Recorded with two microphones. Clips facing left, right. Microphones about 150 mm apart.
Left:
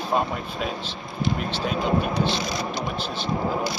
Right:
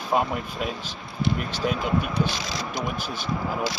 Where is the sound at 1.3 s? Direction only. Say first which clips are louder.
Even; 5° right (ahead or behind).